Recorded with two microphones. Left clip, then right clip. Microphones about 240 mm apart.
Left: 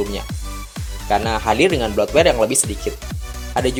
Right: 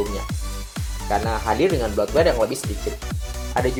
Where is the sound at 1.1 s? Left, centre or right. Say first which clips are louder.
Left 4 dB; left.